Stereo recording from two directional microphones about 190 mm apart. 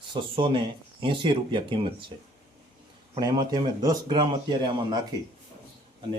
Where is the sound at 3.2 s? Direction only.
20° right (ahead or behind).